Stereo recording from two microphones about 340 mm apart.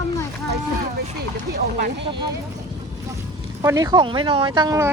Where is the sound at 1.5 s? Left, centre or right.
Right.